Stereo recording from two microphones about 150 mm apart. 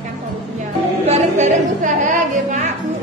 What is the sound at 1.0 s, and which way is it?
Music, 50° right (ahead or behind).